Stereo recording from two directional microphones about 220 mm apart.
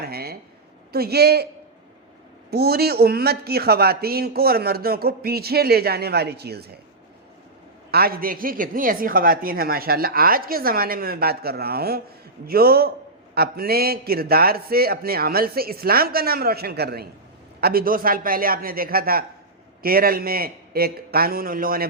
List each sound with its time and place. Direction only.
0.0 s a sound: 45° right (ahead or behind)
0.9 s a man's voice: 45° right (ahead or behind)
2.5 s a man's voice: 45° right (ahead or behind)
7.9 s a woman's voice: 45° right (ahead or behind)